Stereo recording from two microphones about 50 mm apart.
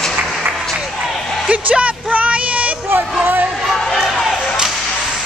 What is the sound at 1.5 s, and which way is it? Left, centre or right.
Music, right.